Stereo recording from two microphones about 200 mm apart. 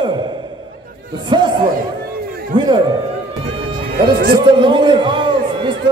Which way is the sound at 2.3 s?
45° right (ahead or behind).